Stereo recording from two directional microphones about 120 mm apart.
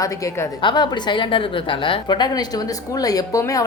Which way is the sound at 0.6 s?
40° left (ahead or behind).